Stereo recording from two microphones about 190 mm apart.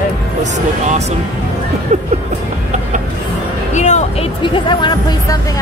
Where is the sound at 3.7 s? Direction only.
40° left (ahead or behind).